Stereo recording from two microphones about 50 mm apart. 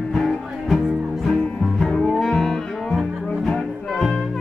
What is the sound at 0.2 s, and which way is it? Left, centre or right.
Music, centre.